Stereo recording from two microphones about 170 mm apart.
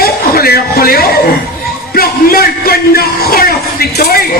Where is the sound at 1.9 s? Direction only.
60° left (ahead or behind).